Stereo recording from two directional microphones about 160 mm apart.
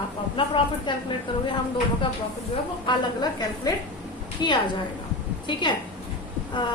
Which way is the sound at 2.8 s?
25° left (ahead or behind).